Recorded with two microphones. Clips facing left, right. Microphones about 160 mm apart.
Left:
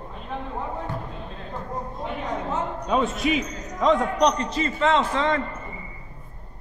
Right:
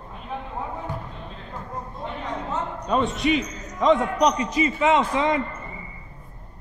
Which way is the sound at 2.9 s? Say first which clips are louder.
Right 1 dB; centre (ahead or behind).